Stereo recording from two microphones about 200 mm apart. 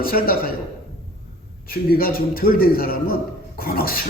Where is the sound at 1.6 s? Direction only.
45° left (ahead or behind).